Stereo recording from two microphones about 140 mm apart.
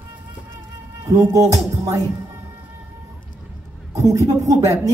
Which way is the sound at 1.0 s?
20° right (ahead or behind).